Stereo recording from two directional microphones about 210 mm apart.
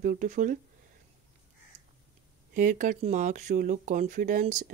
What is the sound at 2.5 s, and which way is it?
Speech, 40° right (ahead or behind).